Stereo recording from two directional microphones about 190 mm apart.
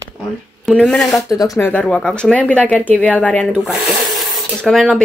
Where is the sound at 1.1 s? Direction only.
20° left (ahead or behind).